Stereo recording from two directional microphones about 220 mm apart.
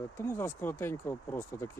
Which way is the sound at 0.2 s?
10° left (ahead or behind).